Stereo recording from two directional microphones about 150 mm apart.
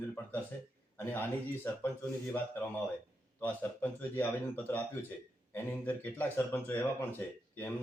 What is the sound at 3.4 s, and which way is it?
Speech, 15° left (ahead or behind).